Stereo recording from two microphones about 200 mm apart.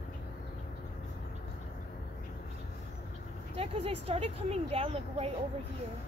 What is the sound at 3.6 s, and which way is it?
Speech, 30° right (ahead or behind).